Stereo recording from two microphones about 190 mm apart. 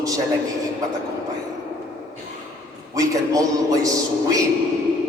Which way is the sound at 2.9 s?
15° right (ahead or behind).